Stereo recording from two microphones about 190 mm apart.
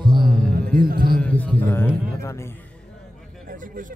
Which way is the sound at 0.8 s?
50° right (ahead or behind).